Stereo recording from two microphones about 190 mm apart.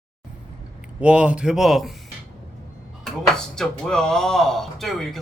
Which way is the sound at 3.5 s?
5° left (ahead or behind).